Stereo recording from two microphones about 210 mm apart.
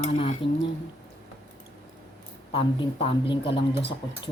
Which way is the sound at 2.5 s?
25° left (ahead or behind).